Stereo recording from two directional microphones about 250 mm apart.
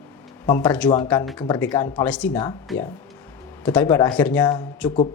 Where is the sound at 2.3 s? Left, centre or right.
Centre.